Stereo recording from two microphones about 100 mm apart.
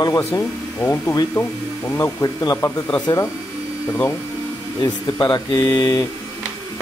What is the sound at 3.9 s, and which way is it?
Speech, 30° left (ahead or behind).